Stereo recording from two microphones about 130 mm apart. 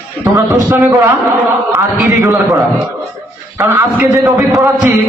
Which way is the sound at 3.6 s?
25° right (ahead or behind).